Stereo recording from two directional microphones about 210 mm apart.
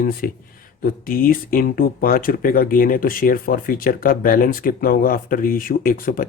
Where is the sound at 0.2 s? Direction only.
45° left (ahead or behind).